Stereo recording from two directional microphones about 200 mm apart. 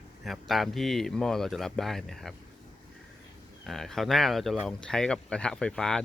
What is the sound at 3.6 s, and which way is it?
Speech, centre (ahead or behind).